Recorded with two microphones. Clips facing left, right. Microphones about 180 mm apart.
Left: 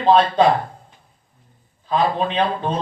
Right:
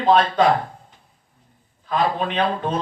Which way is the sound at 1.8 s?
30° left (ahead or behind).